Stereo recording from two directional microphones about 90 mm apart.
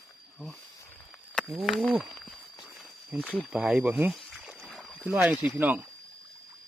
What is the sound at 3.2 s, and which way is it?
Speech, 15° left (ahead or behind).